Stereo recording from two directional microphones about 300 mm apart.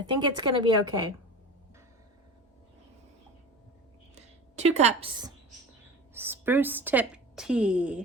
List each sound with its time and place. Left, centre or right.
0.0 s a woman's voice: centre
4.1 s a woman's voice: right
6.1 s a woman's voice: centre